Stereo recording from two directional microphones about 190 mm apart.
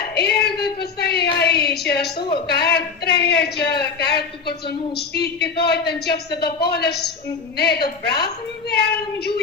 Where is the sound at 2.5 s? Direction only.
60° left (ahead or behind).